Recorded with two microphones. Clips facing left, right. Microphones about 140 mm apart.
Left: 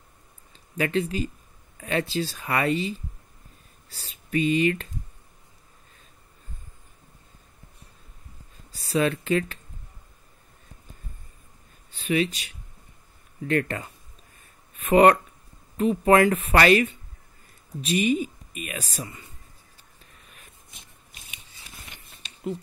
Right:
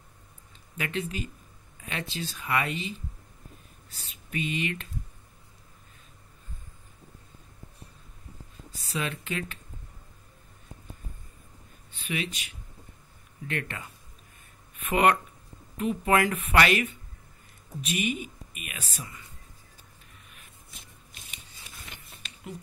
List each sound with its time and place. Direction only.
0.7 s speech: 35° left (ahead or behind)
3.9 s speech: 35° left (ahead or behind)
8.7 s speech: 35° left (ahead or behind)
11.9 s speech: 35° left (ahead or behind)
13.5 s speech: 40° left (ahead or behind)